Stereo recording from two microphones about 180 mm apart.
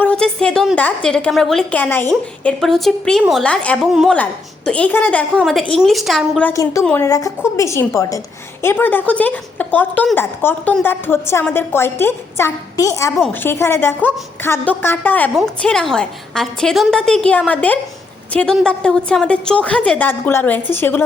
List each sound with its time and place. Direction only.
0.0 s a woman's voice: 5° left (ahead or behind)
6.5 s a woman's voice: 15° left (ahead or behind)